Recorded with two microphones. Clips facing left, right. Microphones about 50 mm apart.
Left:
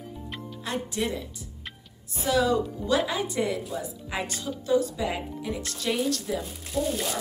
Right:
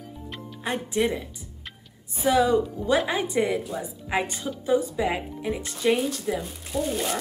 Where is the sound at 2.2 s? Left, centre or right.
Right.